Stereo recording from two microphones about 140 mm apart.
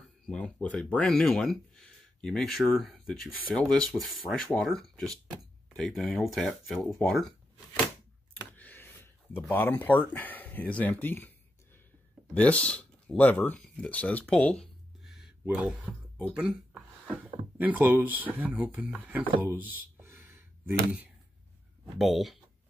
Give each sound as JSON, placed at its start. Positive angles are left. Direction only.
{"t": 0.3, "sound": "speech", "side_deg": 10}
{"t": 7.0, "sound": "shuffling cards", "side_deg": 0}
{"t": 8.5, "sound": "a sound", "side_deg": 15}
{"t": 9.5, "sound": "speech", "side_deg": 15}
{"t": 19.4, "sound": "a sound", "side_deg": -15}
{"t": 21.9, "sound": "speech", "side_deg": 0}